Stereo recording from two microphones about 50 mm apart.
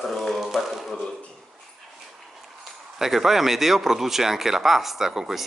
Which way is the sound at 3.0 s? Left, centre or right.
Centre.